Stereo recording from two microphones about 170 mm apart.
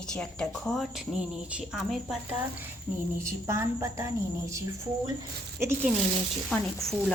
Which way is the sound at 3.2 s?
15° right (ahead or behind).